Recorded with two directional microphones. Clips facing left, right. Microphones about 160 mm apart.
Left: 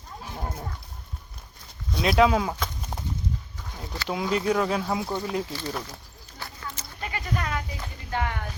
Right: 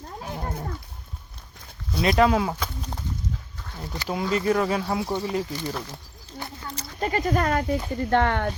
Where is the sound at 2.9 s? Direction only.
10° left (ahead or behind).